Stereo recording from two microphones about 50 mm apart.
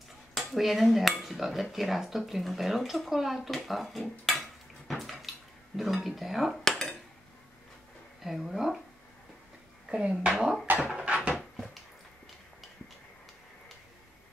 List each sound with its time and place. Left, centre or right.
0.4 s speech: centre
4.3 s dishes: centre
5.8 s speech: centre
8.2 s speech: centre
9.8 s speech: centre
10.8 s a sound: centre
11.3 s dog: centre